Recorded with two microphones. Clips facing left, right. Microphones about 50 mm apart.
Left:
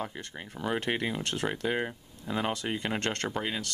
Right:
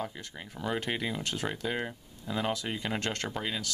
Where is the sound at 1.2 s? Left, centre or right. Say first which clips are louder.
Left 2 dB; centre.